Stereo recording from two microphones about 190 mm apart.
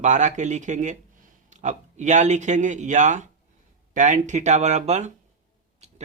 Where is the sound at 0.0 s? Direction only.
40° right (ahead or behind).